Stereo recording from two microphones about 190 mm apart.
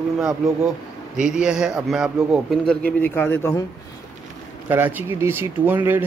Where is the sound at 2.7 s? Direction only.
10° left (ahead or behind).